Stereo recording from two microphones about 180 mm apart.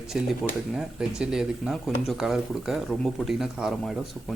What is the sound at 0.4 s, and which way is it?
Speech, centre (ahead or behind).